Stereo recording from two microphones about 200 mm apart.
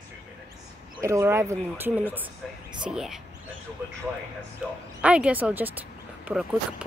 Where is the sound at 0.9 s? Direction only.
15° right (ahead or behind).